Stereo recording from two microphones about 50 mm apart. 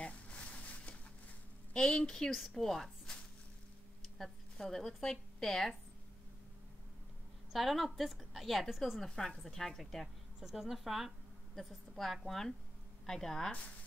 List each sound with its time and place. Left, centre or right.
0.0 s a sound: left
1.7 s a woman's voice: centre
2.1 s a woman's voice: centre
4.2 s a woman's voice: centre
7.5 s a woman's voice: centre
9.1 s a woman's voice: centre
10.4 s a woman's voice: centre